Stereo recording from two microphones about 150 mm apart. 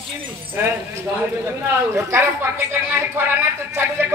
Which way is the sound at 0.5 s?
15° right (ahead or behind).